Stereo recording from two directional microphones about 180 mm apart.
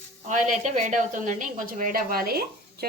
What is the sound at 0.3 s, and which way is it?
A woman's voice, 40° right (ahead or behind).